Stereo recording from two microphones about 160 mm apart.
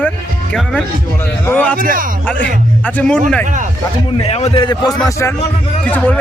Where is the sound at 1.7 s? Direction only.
60° right (ahead or behind).